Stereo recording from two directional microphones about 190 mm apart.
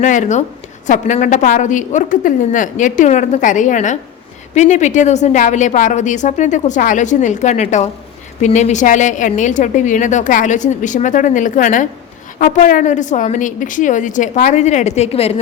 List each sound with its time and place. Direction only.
0.0 s a woman's voice: 40° left (ahead or behind)